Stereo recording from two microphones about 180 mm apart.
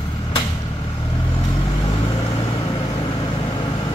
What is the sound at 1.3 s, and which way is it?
Vehicle, 25° left (ahead or behind).